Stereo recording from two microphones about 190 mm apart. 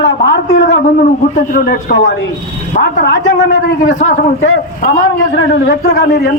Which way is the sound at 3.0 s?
65° left (ahead or behind).